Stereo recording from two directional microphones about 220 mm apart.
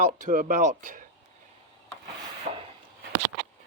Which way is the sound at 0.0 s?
35° right (ahead or behind).